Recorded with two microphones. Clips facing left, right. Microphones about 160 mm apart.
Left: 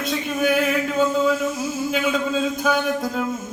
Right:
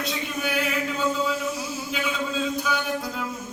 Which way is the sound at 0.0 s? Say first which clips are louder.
Left 7 dB; 50° left (ahead or behind).